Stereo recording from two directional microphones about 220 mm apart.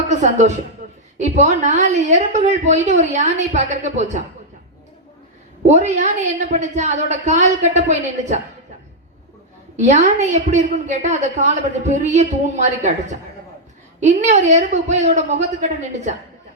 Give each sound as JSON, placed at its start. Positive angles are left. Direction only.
{"t": 0.2, "sound": "a woman's voice", "side_deg": -35}
{"t": 0.8, "sound": "a sound", "side_deg": -35}
{"t": 1.2, "sound": "a woman's voice", "side_deg": -30}
{"t": 5.6, "sound": "a woman's voice", "side_deg": -30}
{"t": 9.7, "sound": "a woman's voice", "side_deg": -30}